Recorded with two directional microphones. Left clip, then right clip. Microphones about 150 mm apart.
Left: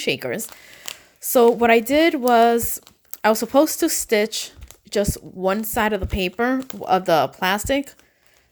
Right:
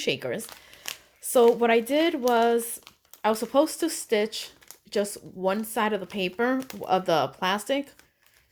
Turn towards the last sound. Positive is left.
turn(degrees=45)  # may be behind; listen again after turning